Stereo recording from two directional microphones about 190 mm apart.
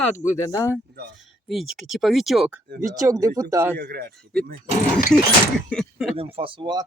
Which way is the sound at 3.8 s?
55° right (ahead or behind).